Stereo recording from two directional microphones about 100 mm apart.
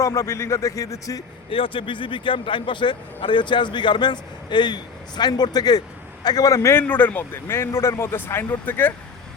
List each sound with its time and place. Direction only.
0.0 s a man's voice: 35° left (ahead or behind)
1.5 s a man's voice: 65° left (ahead or behind); by 6.8 s 30° left (ahead or behind)
6.8 s speech: 15° left (ahead or behind)